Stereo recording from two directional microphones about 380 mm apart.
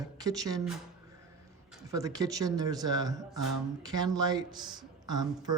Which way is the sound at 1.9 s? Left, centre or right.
Centre.